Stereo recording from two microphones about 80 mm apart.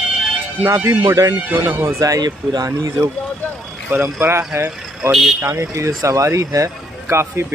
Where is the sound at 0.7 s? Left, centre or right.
Right.